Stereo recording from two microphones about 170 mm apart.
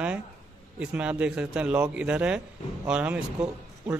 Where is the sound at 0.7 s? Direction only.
10° right (ahead or behind).